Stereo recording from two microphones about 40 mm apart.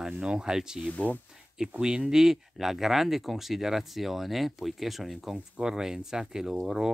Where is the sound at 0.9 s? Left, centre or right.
Left.